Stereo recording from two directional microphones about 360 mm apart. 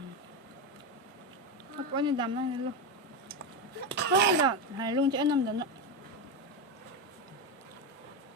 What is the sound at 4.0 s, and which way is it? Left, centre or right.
Speech, right.